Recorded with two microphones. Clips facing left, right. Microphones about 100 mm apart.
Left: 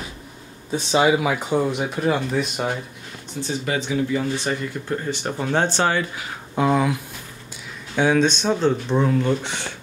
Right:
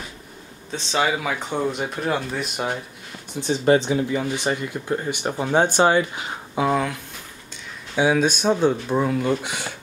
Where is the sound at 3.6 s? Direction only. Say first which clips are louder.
Right 10 dB; 30° right (ahead or behind).